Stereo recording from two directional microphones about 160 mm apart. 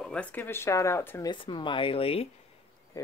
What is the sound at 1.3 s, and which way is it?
Speech, 30° left (ahead or behind).